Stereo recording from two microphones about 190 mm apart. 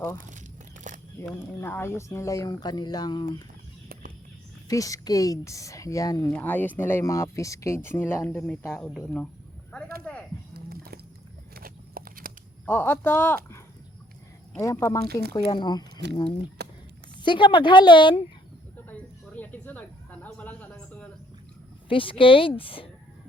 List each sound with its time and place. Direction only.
0.2 s speech: 40° right (ahead or behind)
0.9 s single-lens reflex camera: 40° right (ahead or behind)
1.6 s speech: 10° left (ahead or behind)
4.7 s speech: 15° left (ahead or behind)
6.2 s speech: 10° left (ahead or behind)
10.0 s music: 5° left (ahead or behind)
10.5 s biting: 55° right (ahead or behind)
11.5 s horse: 50° right (ahead or behind)
12.6 s a woman's voice: 10° left (ahead or behind)
16.0 s speech: 65° right (ahead or behind)
16.6 s a sound: 60° right (ahead or behind)
17.2 s a woman's voice: 25° left (ahead or behind)
18.9 s a sound: 10° left (ahead or behind)
21.8 s a woman's voice: 30° left (ahead or behind)